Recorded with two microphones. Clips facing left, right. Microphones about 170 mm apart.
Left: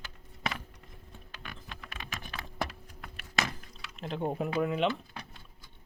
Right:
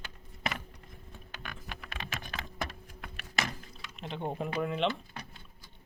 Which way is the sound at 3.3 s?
Centre (ahead or behind).